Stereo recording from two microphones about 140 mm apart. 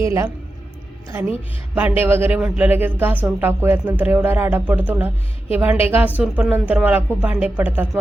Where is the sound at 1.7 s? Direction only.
10° right (ahead or behind).